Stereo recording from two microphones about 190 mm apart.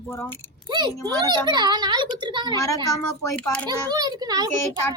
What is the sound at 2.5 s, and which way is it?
Speech, 15° left (ahead or behind).